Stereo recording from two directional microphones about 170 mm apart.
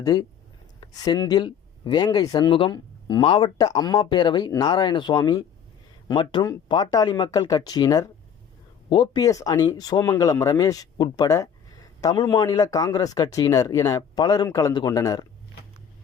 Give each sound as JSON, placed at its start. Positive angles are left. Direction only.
{"t": 0.0, "sound": "speech", "side_deg": 20}